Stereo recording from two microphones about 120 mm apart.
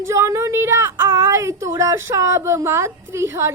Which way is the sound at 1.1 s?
25° right (ahead or behind).